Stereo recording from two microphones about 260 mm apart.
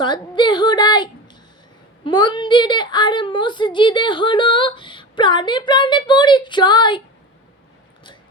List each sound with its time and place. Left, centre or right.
0.0 s a woman's voice: centre